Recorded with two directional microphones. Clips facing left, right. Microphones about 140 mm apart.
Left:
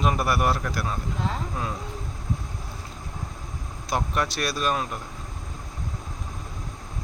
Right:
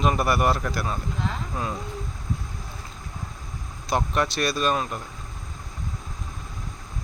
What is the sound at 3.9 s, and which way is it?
A man's voice, 5° left (ahead or behind).